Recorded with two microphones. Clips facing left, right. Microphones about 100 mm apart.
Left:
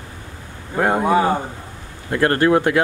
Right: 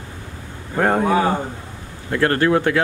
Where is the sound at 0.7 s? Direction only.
5° left (ahead or behind).